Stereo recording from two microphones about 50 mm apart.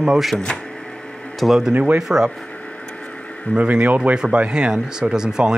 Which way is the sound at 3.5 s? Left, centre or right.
Right.